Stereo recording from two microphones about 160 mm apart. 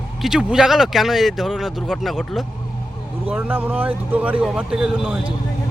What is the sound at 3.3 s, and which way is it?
Speech, 10° right (ahead or behind).